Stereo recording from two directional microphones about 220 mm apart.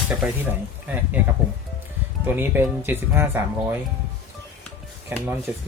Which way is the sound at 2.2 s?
10° right (ahead or behind).